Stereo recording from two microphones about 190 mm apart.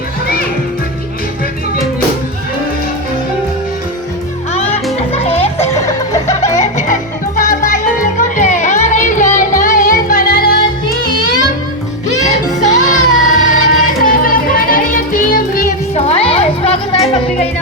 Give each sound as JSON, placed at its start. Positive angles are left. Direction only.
{"t": 5.1, "sound": "children playing", "side_deg": 30}
{"t": 5.8, "sound": "music", "side_deg": 15}
{"t": 6.6, "sound": "music", "side_deg": 40}
{"t": 12.1, "sound": "music", "side_deg": 40}
{"t": 16.0, "sound": "children playing", "side_deg": 30}